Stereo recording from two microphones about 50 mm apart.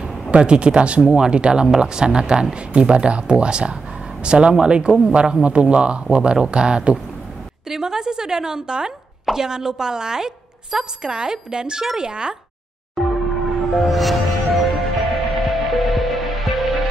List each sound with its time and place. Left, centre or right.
0.3 s speech: right
12.9 s music: centre